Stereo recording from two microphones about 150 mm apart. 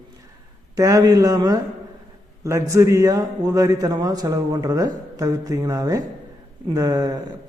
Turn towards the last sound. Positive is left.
turn(degrees=-25)  # may be behind; listen again after turning